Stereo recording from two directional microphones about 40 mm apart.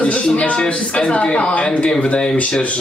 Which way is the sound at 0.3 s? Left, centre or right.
Left.